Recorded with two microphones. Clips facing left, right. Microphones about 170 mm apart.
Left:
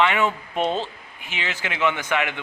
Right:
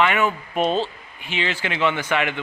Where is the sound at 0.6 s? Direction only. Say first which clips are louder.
Right 3 dB; 15° right (ahead or behind).